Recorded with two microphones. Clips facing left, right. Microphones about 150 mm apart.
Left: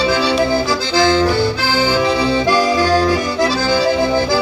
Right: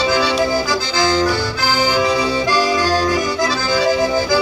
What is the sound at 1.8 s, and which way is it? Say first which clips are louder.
Accordion: left 2 dB; 30° left (ahead or behind).